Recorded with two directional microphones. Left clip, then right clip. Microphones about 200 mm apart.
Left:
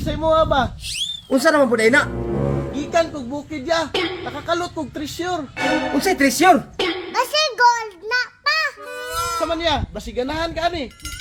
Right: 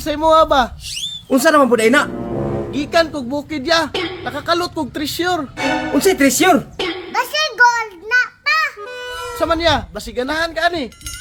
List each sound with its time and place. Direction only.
0.0 s speech: 20° right (ahead or behind)
1.3 s speech: 10° right (ahead or behind)
2.9 s speech: 20° right (ahead or behind)
3.9 s a sound: centre (ahead or behind)
4.4 s speech: 20° right (ahead or behind)
5.5 s speech: 5° right (ahead or behind)
6.4 s a sound: 5° right (ahead or behind)
9.4 s speech: 15° right (ahead or behind)